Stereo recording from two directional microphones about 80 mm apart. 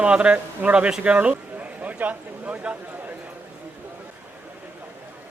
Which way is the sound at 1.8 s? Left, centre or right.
Centre.